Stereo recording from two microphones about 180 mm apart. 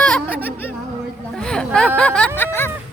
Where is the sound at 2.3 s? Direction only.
10° left (ahead or behind).